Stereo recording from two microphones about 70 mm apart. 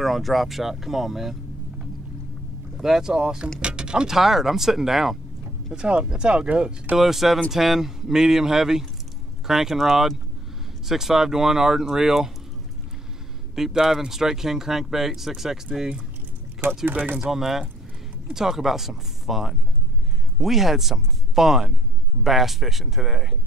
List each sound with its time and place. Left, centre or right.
0.0 s speech: centre
2.8 s speech: centre
7.0 s speech: centre
13.6 s speech: centre
16.8 s speech: right
17.2 s speech: centre